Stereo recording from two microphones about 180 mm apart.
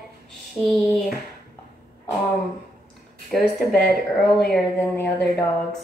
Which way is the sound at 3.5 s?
Centre (ahead or behind).